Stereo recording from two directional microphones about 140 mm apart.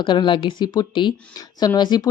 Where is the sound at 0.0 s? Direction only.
35° left (ahead or behind).